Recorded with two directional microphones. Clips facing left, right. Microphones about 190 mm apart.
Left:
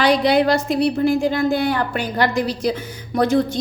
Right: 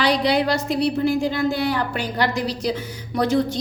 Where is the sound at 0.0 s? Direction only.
50° left (ahead or behind).